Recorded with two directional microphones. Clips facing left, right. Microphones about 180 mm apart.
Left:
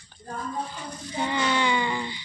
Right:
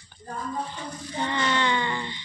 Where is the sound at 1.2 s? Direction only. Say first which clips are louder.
Left 1 dB; 10° left (ahead or behind).